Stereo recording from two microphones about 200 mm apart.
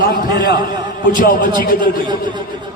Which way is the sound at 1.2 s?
45° left (ahead or behind).